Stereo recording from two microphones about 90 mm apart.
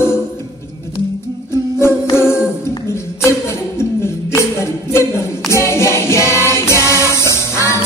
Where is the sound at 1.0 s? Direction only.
65° left (ahead or behind).